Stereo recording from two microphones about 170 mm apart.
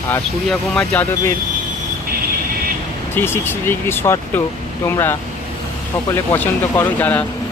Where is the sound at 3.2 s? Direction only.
15° left (ahead or behind).